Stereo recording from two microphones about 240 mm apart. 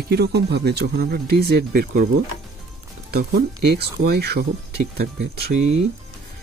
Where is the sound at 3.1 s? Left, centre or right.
Right.